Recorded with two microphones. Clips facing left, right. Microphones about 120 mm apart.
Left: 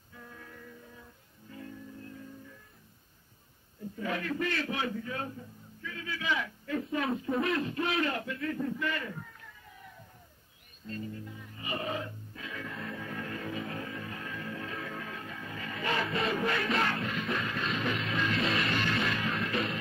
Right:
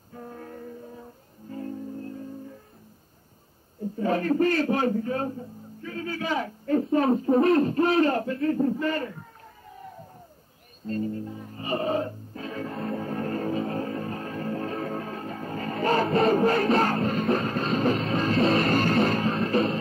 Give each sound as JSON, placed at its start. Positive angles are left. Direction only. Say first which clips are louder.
{"t": 0.1, "sound": "music", "louder": "right 10 dB", "side_deg": -40}
{"t": 3.9, "sound": "a man's voice", "louder": "right 10 dB", "side_deg": -35}
{"t": 9.8, "sound": "crowd", "louder": "right 11 dB", "side_deg": -40}
{"t": 10.9, "sound": "music", "louder": "right 10 dB", "side_deg": -40}